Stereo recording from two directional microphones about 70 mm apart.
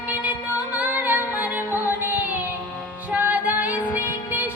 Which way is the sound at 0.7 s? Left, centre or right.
Right.